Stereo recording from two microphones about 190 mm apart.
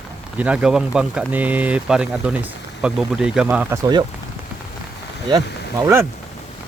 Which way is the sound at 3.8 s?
20° right (ahead or behind).